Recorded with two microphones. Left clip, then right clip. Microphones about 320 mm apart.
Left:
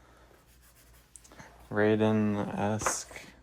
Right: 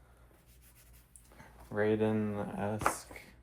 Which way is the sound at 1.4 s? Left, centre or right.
Left.